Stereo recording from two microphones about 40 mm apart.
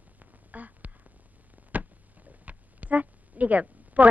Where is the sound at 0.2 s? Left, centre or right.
Right.